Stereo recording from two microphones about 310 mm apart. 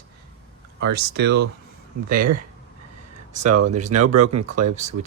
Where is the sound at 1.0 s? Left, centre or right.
Right.